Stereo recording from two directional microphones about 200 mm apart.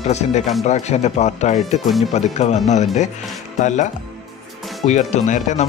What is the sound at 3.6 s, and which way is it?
A man's voice, 35° left (ahead or behind).